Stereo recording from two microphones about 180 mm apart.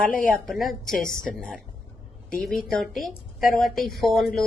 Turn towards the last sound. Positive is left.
turn(degrees=0)  # may be behind; listen again after turning